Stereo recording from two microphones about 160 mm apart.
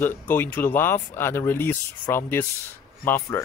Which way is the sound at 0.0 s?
10° left (ahead or behind).